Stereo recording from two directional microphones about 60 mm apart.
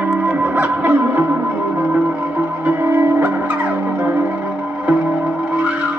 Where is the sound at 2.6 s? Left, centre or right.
Right.